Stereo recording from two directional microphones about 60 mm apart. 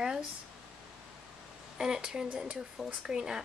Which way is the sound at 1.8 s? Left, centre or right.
Centre.